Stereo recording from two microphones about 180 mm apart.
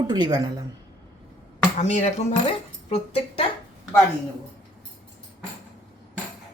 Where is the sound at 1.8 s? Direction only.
40° left (ahead or behind).